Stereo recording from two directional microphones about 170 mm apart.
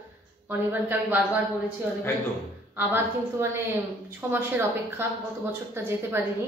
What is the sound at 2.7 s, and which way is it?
A woman's voice, 10° right (ahead or behind).